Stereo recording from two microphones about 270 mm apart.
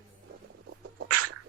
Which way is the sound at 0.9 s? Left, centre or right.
Right.